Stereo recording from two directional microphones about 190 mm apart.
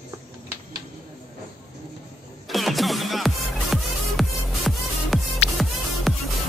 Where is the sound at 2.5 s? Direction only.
Centre (ahead or behind).